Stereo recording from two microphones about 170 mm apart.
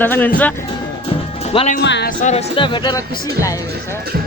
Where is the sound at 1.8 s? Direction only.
90° left.